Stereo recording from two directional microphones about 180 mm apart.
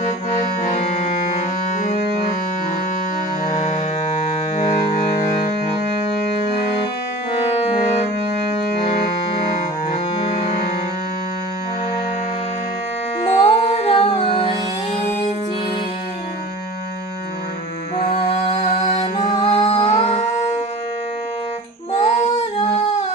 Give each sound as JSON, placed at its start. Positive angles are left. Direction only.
{"t": 0.7, "sound": "music", "side_deg": 40}
{"t": 13.4, "sound": "music", "side_deg": 30}
{"t": 19.2, "sound": "music", "side_deg": 35}
{"t": 21.9, "sound": "music", "side_deg": 40}